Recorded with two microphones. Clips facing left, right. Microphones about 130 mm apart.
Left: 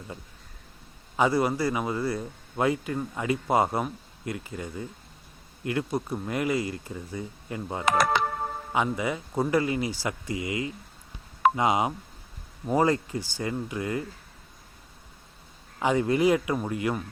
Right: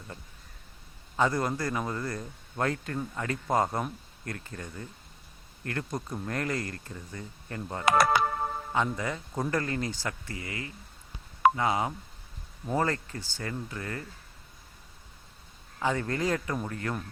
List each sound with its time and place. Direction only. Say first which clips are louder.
1.1 s speech: left 4 dB; 10° left (ahead or behind)
15.8 s speech: left 6 dB; 15° left (ahead or behind)